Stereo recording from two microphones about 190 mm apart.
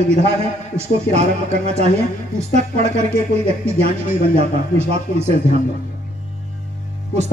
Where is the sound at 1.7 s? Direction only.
35° right (ahead or behind).